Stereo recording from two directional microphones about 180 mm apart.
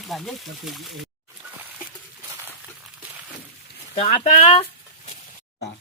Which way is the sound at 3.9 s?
30° left (ahead or behind).